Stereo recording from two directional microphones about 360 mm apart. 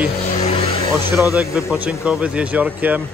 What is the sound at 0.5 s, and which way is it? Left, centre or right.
Vehicle, centre.